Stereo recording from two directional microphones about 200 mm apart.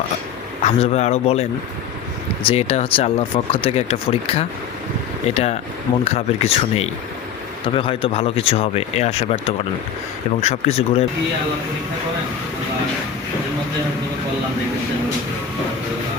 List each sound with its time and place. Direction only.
0.6 s a man's voice: 30° left (ahead or behind)